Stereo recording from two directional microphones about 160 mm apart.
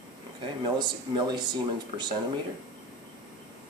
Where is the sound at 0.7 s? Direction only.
30° right (ahead or behind).